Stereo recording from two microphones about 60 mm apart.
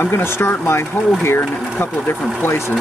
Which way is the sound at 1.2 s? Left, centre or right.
Left.